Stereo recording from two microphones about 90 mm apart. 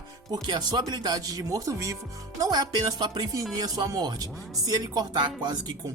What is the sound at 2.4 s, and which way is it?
Speech, 50° right (ahead or behind).